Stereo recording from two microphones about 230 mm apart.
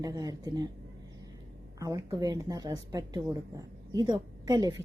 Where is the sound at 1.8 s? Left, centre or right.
Centre.